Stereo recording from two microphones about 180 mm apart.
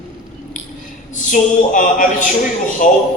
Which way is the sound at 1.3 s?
45° left (ahead or behind).